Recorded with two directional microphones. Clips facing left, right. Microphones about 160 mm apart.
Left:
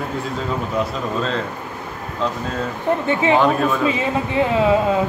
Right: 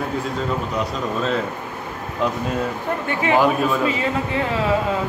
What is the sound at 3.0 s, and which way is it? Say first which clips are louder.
Speech: left 1 dB; 20° left (ahead or behind).